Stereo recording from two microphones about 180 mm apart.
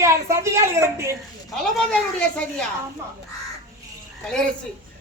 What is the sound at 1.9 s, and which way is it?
Speech, 5° left (ahead or behind).